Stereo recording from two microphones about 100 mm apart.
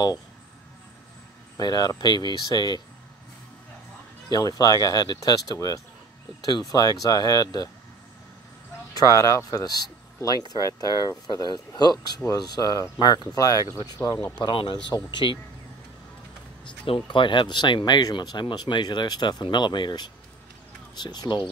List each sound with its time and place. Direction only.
1.6 s speech: 40° left (ahead or behind)
4.3 s speech: 40° left (ahead or behind)
8.9 s speech: 35° left (ahead or behind)
14.4 s speech: 55° left (ahead or behind)
16.8 s speech: 60° left (ahead or behind)